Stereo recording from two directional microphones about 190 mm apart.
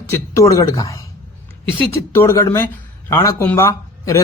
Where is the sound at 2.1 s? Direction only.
15° left (ahead or behind).